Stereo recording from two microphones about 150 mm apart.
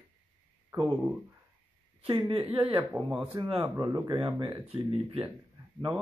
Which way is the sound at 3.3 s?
30° right (ahead or behind).